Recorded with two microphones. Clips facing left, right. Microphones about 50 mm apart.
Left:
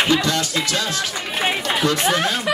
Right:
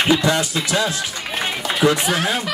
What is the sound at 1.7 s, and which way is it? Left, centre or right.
Run, centre.